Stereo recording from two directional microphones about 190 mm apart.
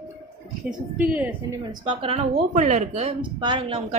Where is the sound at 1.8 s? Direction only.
30° right (ahead or behind).